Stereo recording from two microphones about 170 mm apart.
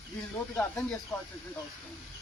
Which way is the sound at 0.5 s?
10° left (ahead or behind).